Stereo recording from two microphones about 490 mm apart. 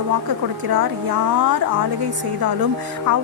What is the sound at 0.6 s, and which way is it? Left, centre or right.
Speech, right.